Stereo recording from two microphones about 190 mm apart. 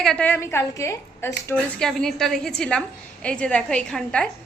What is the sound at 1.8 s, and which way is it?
A woman's voice, centre (ahead or behind).